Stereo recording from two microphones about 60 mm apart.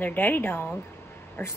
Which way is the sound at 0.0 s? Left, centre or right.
Left.